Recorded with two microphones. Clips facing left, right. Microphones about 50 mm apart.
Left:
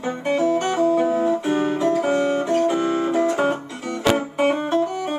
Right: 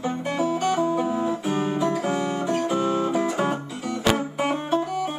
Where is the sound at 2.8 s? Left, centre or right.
Left.